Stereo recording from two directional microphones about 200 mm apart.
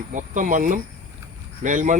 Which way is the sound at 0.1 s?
40° right (ahead or behind).